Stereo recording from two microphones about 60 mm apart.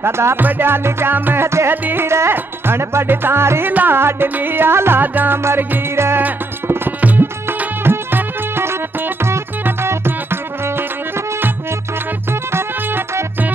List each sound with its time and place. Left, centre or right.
0.0 s music: right
0.4 s music: right
5.4 s music: right